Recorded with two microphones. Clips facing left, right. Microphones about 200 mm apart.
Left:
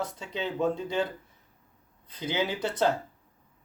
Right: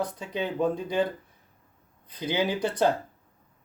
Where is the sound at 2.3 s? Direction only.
15° right (ahead or behind).